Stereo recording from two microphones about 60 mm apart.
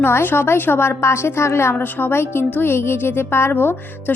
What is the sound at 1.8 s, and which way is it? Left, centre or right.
A woman's voice, left.